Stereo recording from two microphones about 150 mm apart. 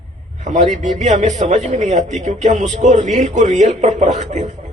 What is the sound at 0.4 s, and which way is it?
A man's voice, 55° right (ahead or behind).